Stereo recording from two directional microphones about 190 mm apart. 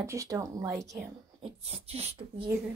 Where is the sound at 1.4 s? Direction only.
30° right (ahead or behind).